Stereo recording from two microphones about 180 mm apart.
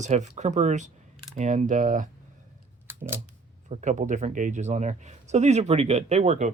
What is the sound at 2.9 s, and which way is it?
Scissors, 10° right (ahead or behind).